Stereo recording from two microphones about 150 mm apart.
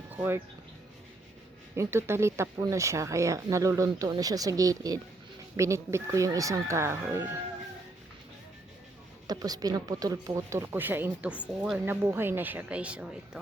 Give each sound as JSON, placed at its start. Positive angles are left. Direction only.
{"t": 0.1, "sound": "speech", "side_deg": -10}
{"t": 1.7, "sound": "speech", "side_deg": -20}
{"t": 9.2, "sound": "speech", "side_deg": -25}